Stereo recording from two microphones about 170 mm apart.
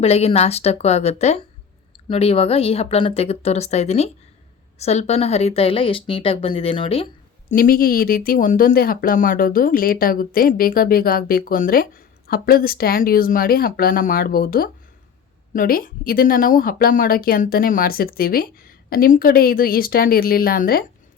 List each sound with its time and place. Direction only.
0.0 s speech: 35° left (ahead or behind)
7.5 s speech: 60° left (ahead or behind)